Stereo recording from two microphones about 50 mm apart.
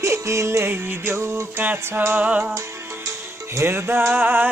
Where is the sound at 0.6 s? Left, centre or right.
Right.